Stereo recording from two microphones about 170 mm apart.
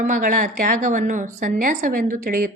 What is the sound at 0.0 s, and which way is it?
A woman's voice, 50° right (ahead or behind).